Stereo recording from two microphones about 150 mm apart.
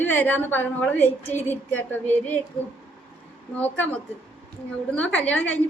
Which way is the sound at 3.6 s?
10° left (ahead or behind).